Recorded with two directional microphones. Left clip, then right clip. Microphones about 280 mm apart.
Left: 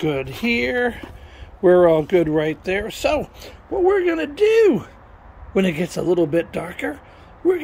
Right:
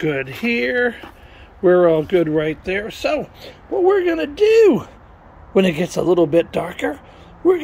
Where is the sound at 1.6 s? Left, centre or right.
Left.